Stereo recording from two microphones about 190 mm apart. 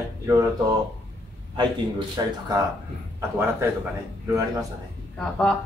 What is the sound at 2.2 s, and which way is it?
Speech, 20° right (ahead or behind).